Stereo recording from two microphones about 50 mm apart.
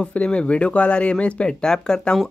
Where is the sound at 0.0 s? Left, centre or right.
Left.